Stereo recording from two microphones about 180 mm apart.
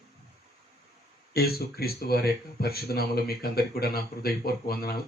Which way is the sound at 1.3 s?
60° left (ahead or behind).